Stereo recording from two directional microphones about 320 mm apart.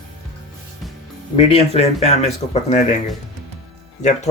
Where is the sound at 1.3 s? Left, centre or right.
Centre.